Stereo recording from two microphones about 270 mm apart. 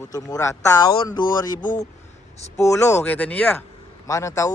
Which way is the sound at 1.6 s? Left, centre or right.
Left.